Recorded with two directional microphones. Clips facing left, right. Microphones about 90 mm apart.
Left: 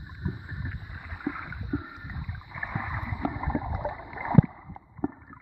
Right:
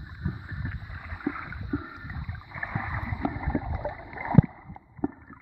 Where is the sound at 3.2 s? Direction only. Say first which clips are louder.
Even; 15° left (ahead or behind).